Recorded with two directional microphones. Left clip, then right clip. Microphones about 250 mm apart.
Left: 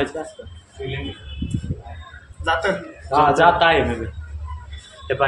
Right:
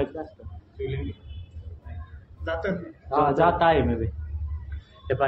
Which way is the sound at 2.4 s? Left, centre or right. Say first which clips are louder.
Left 9 dB; left.